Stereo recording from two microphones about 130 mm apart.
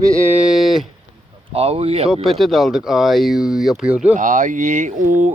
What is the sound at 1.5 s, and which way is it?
Speech, 50° right (ahead or behind).